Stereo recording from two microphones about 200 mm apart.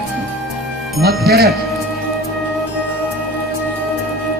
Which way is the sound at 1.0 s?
50° right (ahead or behind).